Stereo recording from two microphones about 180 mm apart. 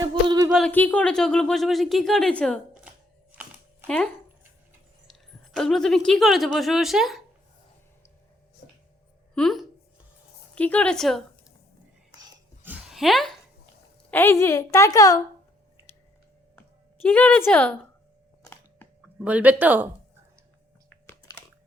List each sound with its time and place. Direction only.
0.1 s a sound: 20° right (ahead or behind)
0.5 s speech: 5° left (ahead or behind)
3.8 s speech: 5° left (ahead or behind)
9.3 s speech: centre (ahead or behind)
12.6 s a sound: 5° right (ahead or behind)
14.1 s a woman's voice: 10° left (ahead or behind)
16.6 s speech: 10° left (ahead or behind)
18.4 s chewing: 15° left (ahead or behind)
19.0 s speech: 10° right (ahead or behind)
20.9 s chewing: 10° left (ahead or behind)